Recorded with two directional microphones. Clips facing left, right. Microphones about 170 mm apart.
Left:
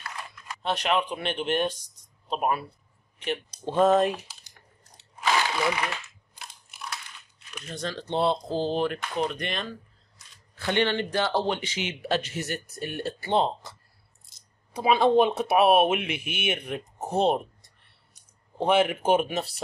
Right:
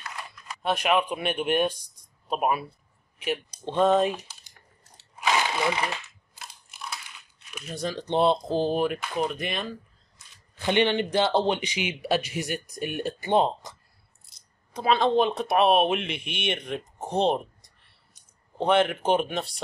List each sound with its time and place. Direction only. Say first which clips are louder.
0.6 s speech: right 2 dB; 10° right (ahead or behind)
3.6 s speech: left 1 dB; 5° left (ahead or behind)
6.3 s mechanisms: right 1 dB; centre (ahead or behind)
7.5 s a man's voice: right 2 dB; 10° right (ahead or behind)
10.5 s a man's voice: right 2 dB; 15° right (ahead or behind)
14.7 s speech: left 2 dB; 10° left (ahead or behind)